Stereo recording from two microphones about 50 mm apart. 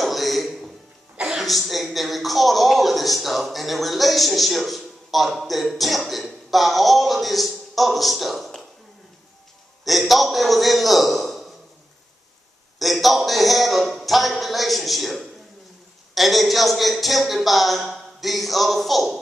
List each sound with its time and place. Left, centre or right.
0.0 s a sound: centre
1.3 s a man's voice: centre
9.8 s a man's voice: centre
12.7 s a man's voice: centre